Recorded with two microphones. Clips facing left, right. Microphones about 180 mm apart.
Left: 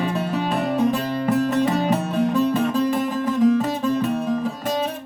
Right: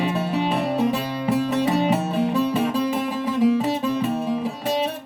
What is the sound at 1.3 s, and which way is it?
Music, 45° left (ahead or behind).